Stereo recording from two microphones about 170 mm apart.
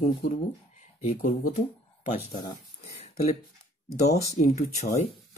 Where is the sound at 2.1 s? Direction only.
30° left (ahead or behind).